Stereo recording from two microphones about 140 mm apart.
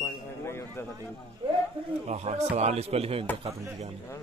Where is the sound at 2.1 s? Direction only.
50° right (ahead or behind).